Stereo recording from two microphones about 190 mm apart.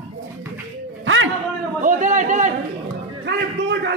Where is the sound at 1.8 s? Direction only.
40° right (ahead or behind).